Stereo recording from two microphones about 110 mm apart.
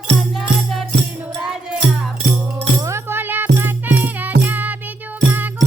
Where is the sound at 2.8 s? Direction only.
25° right (ahead or behind).